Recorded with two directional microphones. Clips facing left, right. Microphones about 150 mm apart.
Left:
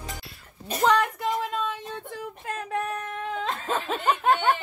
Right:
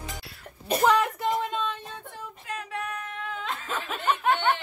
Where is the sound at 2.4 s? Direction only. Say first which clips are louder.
Left 4 dB; 45° left (ahead or behind).